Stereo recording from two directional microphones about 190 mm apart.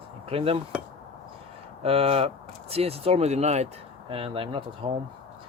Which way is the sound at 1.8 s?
30° right (ahead or behind).